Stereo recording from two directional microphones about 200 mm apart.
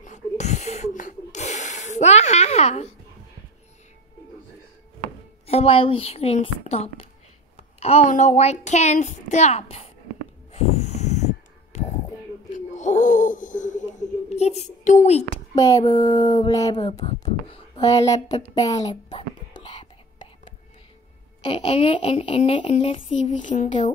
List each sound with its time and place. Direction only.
0.0 s snort: 35° left (ahead or behind)
5.5 s a child's voice: 30° left (ahead or behind)
10.5 s a sound: 30° left (ahead or behind)
14.3 s a woman's voice: 35° left (ahead or behind)
15.5 s speech: 15° left (ahead or behind)
17.0 s a sound: 35° left (ahead or behind)
17.7 s speech: 20° left (ahead or behind)
19.6 s whispering: 25° left (ahead or behind)
21.4 s speech: 25° left (ahead or behind)
23.4 s a child's voice: 40° left (ahead or behind)